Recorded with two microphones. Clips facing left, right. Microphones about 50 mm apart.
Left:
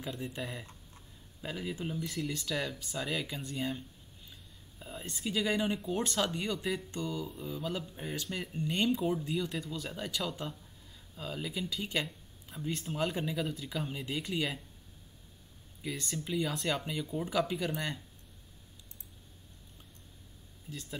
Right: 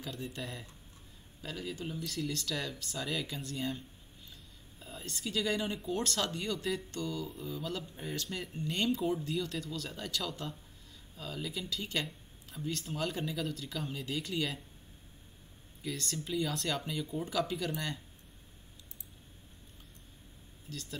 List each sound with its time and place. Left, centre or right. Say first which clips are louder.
0.0 s a woman's voice: left 2 dB; centre
15.8 s speech: left 1 dB; centre
20.7 s speech: left 1 dB; centre